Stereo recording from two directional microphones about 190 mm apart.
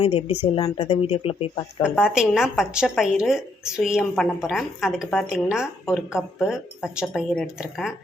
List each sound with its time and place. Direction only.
0.0 s speech: 30° left (ahead or behind)
1.8 s a woman's voice: 5° right (ahead or behind)